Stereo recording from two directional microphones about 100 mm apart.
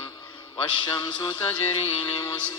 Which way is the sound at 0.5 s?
50° left (ahead or behind).